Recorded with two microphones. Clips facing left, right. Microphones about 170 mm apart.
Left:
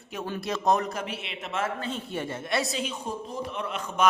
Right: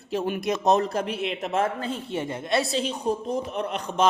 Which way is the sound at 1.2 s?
40° right (ahead or behind).